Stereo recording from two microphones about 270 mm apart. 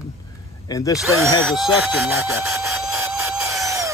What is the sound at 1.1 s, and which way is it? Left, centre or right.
Speech, centre.